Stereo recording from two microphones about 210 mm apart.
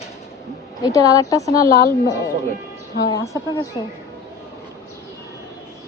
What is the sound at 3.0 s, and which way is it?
Speech, 15° left (ahead or behind).